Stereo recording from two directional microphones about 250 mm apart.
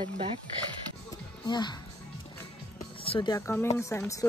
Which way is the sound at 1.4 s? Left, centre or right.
Centre.